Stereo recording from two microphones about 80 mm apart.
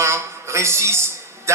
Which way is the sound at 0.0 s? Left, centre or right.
Right.